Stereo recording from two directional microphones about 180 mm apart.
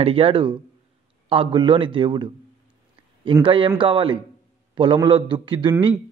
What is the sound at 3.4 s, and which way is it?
Speech, 30° right (ahead or behind).